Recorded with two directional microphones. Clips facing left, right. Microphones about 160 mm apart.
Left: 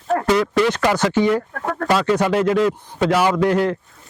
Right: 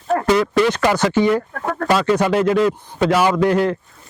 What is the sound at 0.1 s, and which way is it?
Speech, 15° right (ahead or behind).